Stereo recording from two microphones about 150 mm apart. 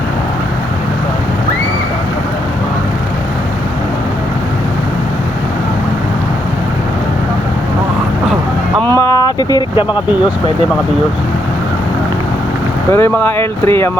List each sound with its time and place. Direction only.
8.9 s vehicle: 20° left (ahead or behind)
12.9 s speech: 15° left (ahead or behind)